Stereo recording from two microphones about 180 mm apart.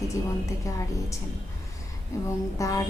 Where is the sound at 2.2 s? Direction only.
20° left (ahead or behind).